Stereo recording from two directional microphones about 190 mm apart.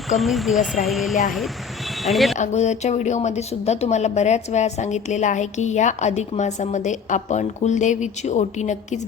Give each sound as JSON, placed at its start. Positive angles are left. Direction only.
{"t": 0.1, "sound": "speech", "side_deg": 0}
{"t": 2.3, "sound": "a woman's voice", "side_deg": 35}